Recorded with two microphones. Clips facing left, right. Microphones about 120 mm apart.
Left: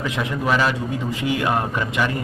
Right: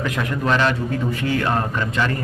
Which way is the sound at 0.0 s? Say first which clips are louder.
Right 1 dB; 5° left (ahead or behind).